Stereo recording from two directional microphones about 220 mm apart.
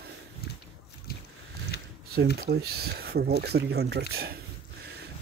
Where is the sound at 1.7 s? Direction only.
50° left (ahead or behind).